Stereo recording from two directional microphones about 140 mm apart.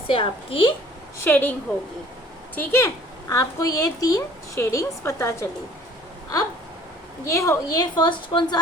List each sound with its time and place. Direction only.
0.1 s a woman's voice: 40° left (ahead or behind)
1.2 s a woman's voice: 15° left (ahead or behind)
2.6 s a woman's voice: 20° left (ahead or behind)
7.3 s a woman's voice: 20° left (ahead or behind)